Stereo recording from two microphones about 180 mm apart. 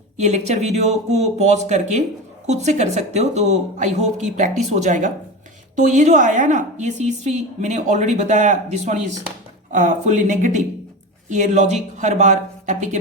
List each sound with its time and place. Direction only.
0.2 s a woman's voice: 40° right (ahead or behind)